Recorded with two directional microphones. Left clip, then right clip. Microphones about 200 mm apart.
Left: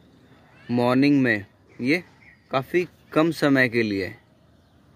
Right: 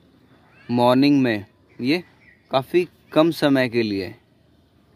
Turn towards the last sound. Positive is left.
turn(degrees=-10)  # may be behind; listen again after turning